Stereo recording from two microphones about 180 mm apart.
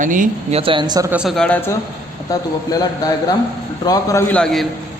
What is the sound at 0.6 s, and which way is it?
Speech, 25° right (ahead or behind).